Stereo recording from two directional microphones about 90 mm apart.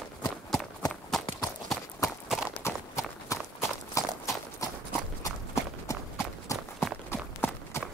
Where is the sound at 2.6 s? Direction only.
30° left (ahead or behind).